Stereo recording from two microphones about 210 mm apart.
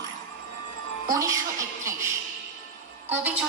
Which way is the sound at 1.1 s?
15° right (ahead or behind).